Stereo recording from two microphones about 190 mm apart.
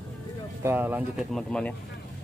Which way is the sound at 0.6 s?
10° right (ahead or behind).